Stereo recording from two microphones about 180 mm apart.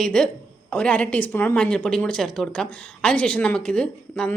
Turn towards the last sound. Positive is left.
turn(degrees=5)  # may be behind; listen again after turning